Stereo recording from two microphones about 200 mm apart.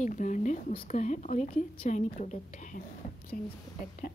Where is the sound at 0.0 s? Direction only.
40° left (ahead or behind).